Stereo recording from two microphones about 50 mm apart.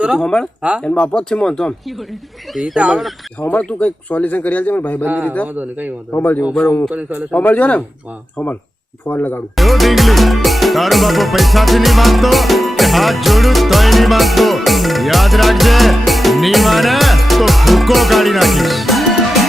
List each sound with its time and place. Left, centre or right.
0.2 s speech: centre
2.8 s speech: right
3.6 s speech: left
5.0 s a man's voice: right
6.1 s speech: left
7.3 s speech: left
9.0 s speech: left
9.6 s music: centre